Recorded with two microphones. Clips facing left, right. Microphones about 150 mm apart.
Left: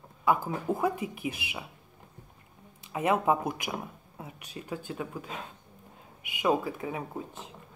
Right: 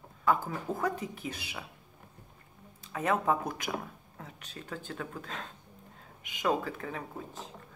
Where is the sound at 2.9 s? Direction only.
15° left (ahead or behind).